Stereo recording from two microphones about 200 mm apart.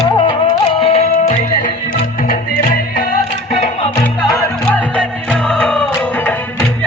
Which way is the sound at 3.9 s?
15° left (ahead or behind).